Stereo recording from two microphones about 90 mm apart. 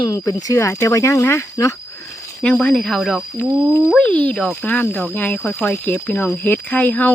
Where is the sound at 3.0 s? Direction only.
Centre (ahead or behind).